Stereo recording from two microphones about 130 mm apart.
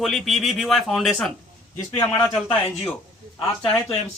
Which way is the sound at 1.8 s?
30° left (ahead or behind).